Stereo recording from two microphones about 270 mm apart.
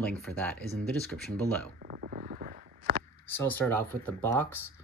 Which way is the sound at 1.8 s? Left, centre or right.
Right.